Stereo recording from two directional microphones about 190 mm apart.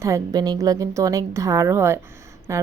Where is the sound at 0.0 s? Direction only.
20° right (ahead or behind).